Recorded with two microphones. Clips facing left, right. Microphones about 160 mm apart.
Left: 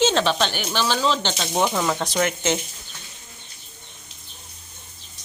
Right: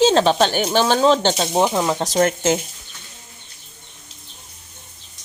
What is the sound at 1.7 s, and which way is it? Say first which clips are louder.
Speech: right 3 dB; 15° right (ahead or behind).